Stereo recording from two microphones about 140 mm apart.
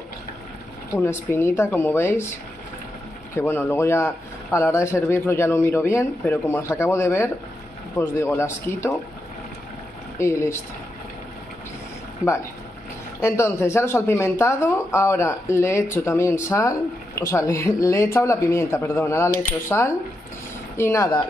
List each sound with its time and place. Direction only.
0.9 s speech: 15° left (ahead or behind)
3.3 s speech: 15° left (ahead or behind)
10.1 s speech: 20° left (ahead or behind)
13.2 s speech: 20° left (ahead or behind)